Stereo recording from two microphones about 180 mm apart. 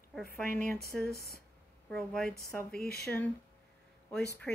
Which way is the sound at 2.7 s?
60° left (ahead or behind).